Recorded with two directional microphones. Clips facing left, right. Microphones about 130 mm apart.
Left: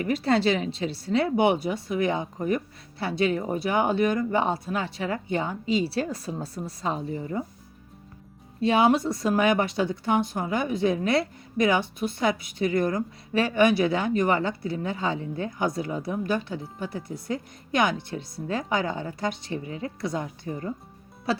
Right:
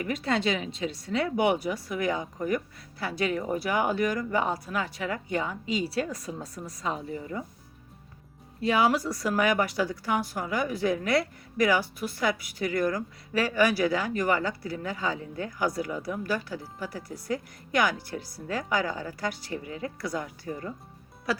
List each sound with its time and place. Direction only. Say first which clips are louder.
0.0 s a woman's voice: left 5 dB; 35° left (ahead or behind)
8.6 s a woman's voice: left 3 dB; 25° left (ahead or behind)
21.3 s music: left 3 dB; 25° left (ahead or behind)